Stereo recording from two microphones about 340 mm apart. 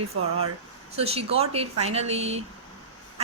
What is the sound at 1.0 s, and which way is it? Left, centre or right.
Speech, centre.